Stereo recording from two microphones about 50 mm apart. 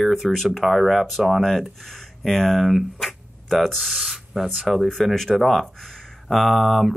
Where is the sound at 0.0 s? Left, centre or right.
Centre.